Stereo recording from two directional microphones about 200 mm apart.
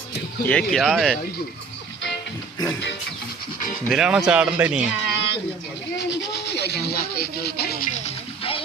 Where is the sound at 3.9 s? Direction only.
Centre (ahead or behind).